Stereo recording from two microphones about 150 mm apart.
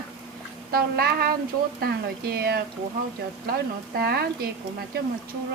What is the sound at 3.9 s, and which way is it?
Speech, 90° right.